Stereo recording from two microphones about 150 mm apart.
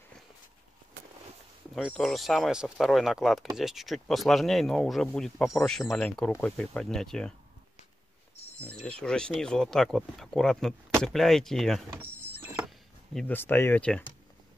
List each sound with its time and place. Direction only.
1.8 s speech: centre (ahead or behind)
8.8 s speech: 5° left (ahead or behind)
11.9 s power windows: 15° right (ahead or behind)
12.6 s a sound: centre (ahead or behind)
13.3 s speech: 15° left (ahead or behind)